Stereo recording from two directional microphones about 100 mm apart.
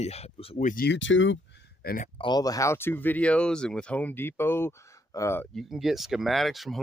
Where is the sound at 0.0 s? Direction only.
90° left.